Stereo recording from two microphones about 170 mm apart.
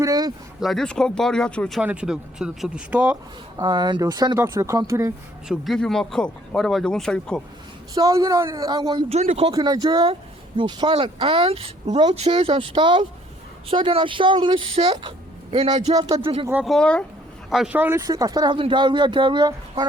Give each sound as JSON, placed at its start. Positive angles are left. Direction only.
{"t": 0.0, "sound": "speech", "side_deg": -20}
{"t": 0.6, "sound": "speech", "side_deg": 0}
{"t": 1.8, "sound": "speech", "side_deg": -5}
{"t": 3.6, "sound": "speech", "side_deg": -25}
{"t": 5.5, "sound": "speech", "side_deg": 0}
{"t": 7.9, "sound": "speech", "side_deg": -20}
{"t": 9.0, "sound": "speech", "side_deg": -40}
{"t": 9.5, "sound": "speech", "side_deg": -25}
{"t": 16.6, "sound": "speech", "side_deg": 5}
{"t": 17.5, "sound": "speech", "side_deg": -5}